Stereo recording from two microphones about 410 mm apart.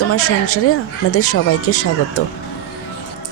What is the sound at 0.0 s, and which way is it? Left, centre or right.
Speech, left.